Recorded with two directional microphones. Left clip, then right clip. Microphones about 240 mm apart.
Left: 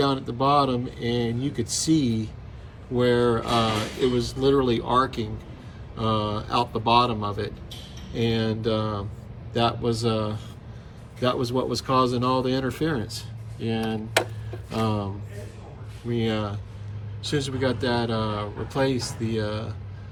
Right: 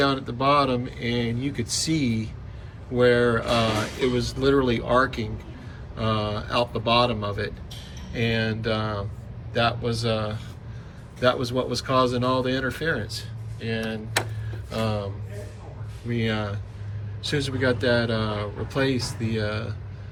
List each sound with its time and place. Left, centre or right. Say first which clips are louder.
0.0 s speech: right 1 dB; centre
16.0 s speech: left 1 dB; centre